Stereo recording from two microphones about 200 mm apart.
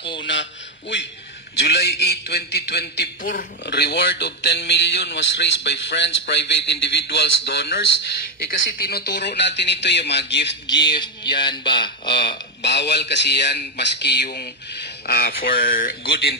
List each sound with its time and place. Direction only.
0.2 s a man's voice: 65° left (ahead or behind)
3.2 s a man's voice: 40° left (ahead or behind)
3.6 s a man's voice: 55° left (ahead or behind)
8.5 s a man's voice: 50° left (ahead or behind)
10.7 s speech: 20° left (ahead or behind)
12.6 s a man's voice: 60° left (ahead or behind)